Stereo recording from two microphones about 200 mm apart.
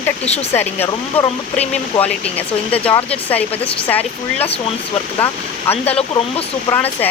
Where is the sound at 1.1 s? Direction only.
25° left (ahead or behind).